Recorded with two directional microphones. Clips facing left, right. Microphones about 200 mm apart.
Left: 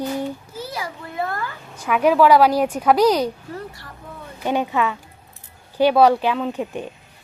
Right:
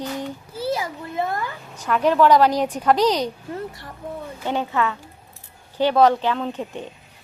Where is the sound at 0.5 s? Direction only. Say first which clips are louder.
Right 5 dB; 25° right (ahead or behind).